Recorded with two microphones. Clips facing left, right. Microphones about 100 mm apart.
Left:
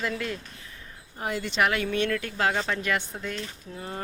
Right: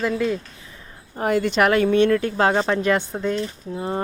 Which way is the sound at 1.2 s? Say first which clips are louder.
Right 8 dB; 55° right (ahead or behind).